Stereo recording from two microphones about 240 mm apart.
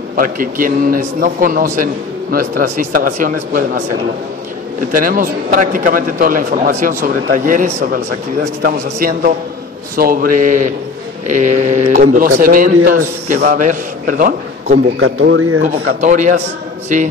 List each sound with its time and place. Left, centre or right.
0.1 s a man's voice: right
4.9 s a man's voice: right
15.0 s speech: right
15.6 s a man's voice: right